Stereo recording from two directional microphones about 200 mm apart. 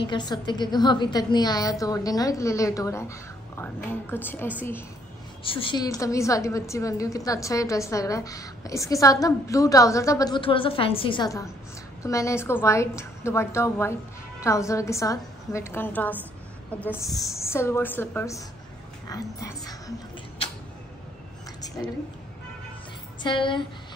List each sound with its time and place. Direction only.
0.0 s a woman's voice: 20° left (ahead or behind)
5.4 s a woman's voice: 25° left (ahead or behind)
23.2 s a woman's voice: 25° left (ahead or behind)